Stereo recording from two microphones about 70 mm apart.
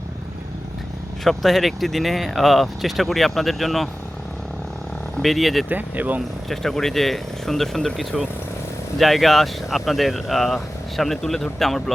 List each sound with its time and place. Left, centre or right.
1.2 s speech: centre
5.2 s speech: centre
5.6 s speech: right
6.5 s speech: centre